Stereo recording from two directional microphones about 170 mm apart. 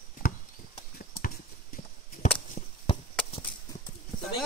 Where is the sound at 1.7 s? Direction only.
55° left (ahead or behind).